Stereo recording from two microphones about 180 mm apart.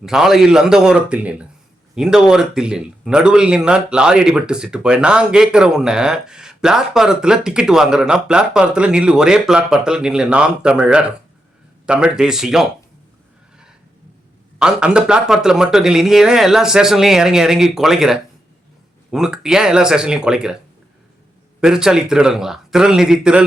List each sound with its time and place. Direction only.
0.0 s speech: 5° right (ahead or behind)
14.6 s speech: 5° right (ahead or behind)
21.6 s speech: 5° right (ahead or behind)